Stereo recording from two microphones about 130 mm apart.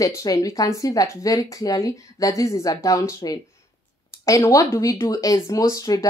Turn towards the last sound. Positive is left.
turn(degrees=25)  # may be behind; listen again after turning